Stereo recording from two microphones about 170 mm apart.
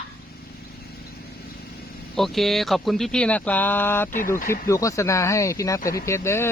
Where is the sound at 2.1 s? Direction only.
Centre (ahead or behind).